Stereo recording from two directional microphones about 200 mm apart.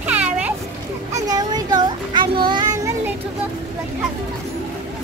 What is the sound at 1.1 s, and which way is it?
Child singing, 20° right (ahead or behind).